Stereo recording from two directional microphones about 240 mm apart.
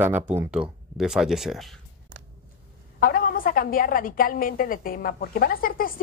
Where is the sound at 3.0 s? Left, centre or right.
Left.